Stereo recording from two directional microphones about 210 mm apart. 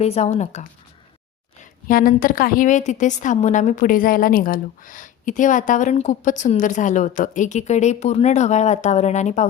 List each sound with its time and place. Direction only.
0.0 s a woman's voice: 30° left (ahead or behind)
1.9 s a woman's voice: 45° left (ahead or behind)